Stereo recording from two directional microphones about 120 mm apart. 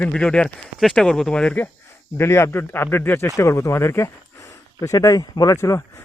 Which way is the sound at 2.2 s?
20° left (ahead or behind).